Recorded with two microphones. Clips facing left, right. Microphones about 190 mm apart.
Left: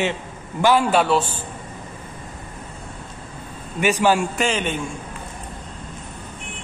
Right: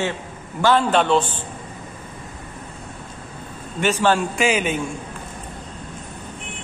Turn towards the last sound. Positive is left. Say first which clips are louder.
# right 2 dB
turn(degrees=-5)  # may be behind; listen again after turning